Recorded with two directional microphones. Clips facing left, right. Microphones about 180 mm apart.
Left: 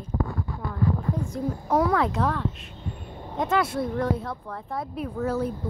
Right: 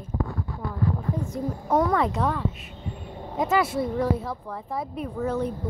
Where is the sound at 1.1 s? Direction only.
Centre (ahead or behind).